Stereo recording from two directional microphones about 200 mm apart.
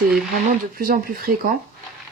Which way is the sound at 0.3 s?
45° right (ahead or behind).